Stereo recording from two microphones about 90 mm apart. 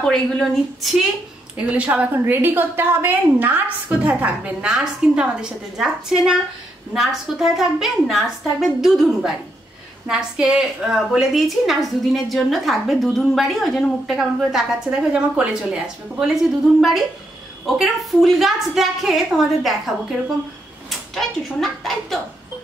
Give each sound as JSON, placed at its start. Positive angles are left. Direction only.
{"t": 0.0, "sound": "a woman's voice", "side_deg": 5}
{"t": 1.6, "sound": "a woman's voice", "side_deg": -15}